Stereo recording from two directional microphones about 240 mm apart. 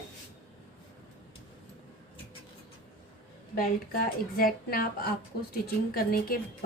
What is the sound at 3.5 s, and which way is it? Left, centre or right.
A woman's voice, left.